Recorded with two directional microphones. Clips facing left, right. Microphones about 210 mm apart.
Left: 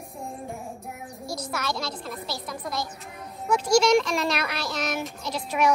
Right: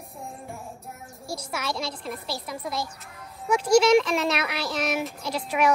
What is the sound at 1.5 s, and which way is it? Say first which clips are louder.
A child's voice: right 1 dB; 5° right (ahead or behind).